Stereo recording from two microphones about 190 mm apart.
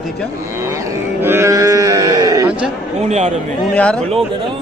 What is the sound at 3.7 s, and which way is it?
Speech, 5° left (ahead or behind).